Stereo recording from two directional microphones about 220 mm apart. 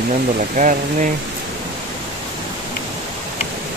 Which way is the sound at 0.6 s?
35° right (ahead or behind).